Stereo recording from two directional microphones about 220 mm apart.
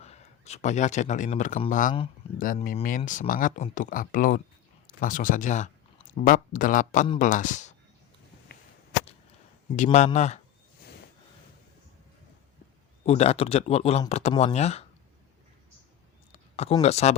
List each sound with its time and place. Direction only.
0.0 s speech: 30° left (ahead or behind)
9.7 s speech: 35° left (ahead or behind)
13.1 s speech: 30° left (ahead or behind)
16.3 s a sound: 30° left (ahead or behind)
16.8 s speech: 30° left (ahead or behind)